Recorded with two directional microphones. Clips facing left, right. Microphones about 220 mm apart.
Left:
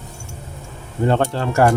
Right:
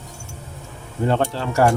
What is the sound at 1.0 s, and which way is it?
Speech, 55° left (ahead or behind).